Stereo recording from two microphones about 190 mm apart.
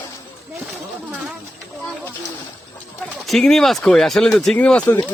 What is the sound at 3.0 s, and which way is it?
Speech, centre (ahead or behind).